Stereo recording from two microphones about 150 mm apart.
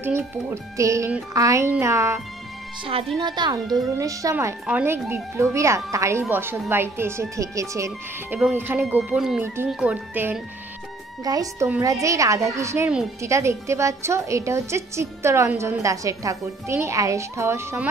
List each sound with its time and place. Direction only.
0.0 s a woman's voice: 15° right (ahead or behind)
2.8 s a woman's voice: 40° right (ahead or behind); by 10.4 s 10° right (ahead or behind)
11.2 s a woman's voice: 25° right (ahead or behind)